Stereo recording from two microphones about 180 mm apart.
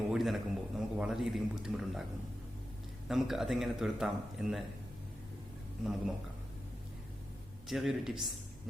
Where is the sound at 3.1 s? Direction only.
Centre (ahead or behind).